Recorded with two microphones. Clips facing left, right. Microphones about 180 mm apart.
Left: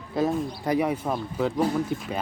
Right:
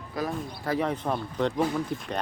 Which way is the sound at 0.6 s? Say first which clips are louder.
Left 2 dB; 15° left (ahead or behind).